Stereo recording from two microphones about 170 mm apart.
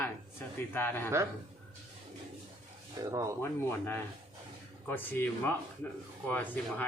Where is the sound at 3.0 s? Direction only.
20° right (ahead or behind).